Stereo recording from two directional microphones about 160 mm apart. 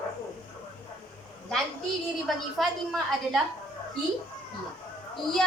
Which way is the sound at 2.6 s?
Centre (ahead or behind).